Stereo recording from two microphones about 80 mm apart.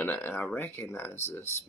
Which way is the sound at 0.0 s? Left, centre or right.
Left.